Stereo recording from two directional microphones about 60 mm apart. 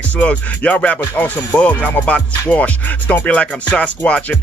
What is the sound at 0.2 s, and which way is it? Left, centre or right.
Music, left.